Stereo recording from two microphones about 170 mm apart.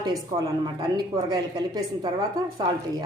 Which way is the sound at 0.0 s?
20° right (ahead or behind).